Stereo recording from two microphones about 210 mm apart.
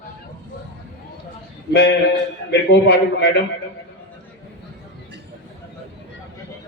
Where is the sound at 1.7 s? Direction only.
55° left (ahead or behind).